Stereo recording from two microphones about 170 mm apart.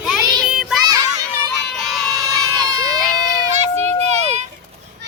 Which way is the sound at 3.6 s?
40° right (ahead or behind).